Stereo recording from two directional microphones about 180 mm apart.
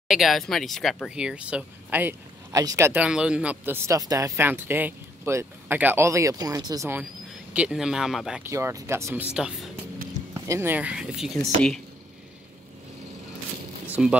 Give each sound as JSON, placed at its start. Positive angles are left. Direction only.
{"t": 0.1, "sound": "speech", "side_deg": 0}
{"t": 8.5, "sound": "speech", "side_deg": -15}
{"t": 10.3, "sound": "speech", "side_deg": -15}
{"t": 13.8, "sound": "zipper", "side_deg": -10}